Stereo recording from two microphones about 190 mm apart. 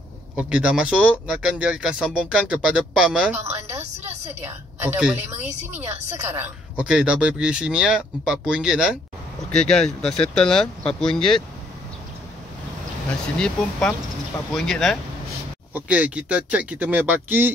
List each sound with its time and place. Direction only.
0.4 s speech: 5° right (ahead or behind)
3.8 s a sound: 35° right (ahead or behind)
4.5 s speech: 10° right (ahead or behind)
13.4 s speech: 5° left (ahead or behind)